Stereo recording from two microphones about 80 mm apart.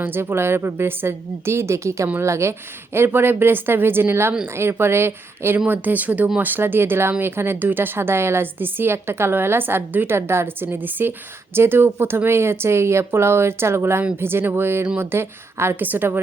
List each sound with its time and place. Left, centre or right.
0.0 s a woman's voice: right
6.5 s a woman's voice: right